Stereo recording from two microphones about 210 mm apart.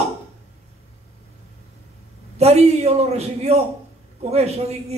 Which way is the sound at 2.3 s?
30° right (ahead or behind).